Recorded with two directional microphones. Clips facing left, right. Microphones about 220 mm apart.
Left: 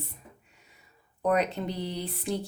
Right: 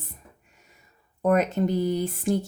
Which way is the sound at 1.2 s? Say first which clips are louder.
Right 5 dB; 45° right (ahead or behind).